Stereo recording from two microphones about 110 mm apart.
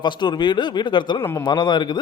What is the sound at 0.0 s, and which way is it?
Speech, 40° left (ahead or behind).